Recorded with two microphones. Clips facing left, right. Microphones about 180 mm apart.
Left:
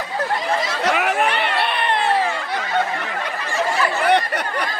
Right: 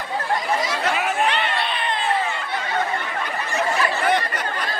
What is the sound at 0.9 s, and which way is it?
Crowd, 65° left (ahead or behind).